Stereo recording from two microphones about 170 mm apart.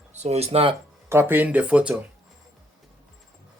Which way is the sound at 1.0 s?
15° right (ahead or behind).